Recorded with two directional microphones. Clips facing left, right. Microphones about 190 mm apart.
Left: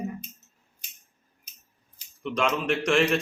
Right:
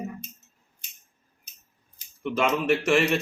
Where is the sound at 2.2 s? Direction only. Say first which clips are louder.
Right 2 dB; 5° right (ahead or behind).